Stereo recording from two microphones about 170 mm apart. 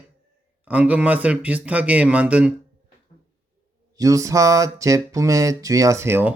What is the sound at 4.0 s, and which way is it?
Speech, 20° right (ahead or behind).